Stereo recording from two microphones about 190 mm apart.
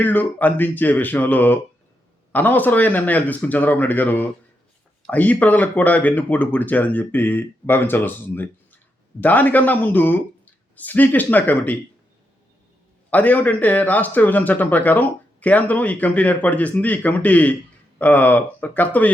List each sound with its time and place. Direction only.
0.0 s speech: 10° left (ahead or behind)
13.1 s speech: 10° left (ahead or behind)